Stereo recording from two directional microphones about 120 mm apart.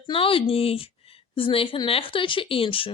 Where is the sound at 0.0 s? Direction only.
50° left (ahead or behind).